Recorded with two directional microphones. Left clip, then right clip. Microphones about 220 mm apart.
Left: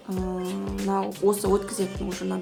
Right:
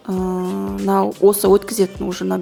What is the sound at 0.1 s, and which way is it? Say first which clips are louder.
Music: right 9 dB; 35° right (ahead or behind).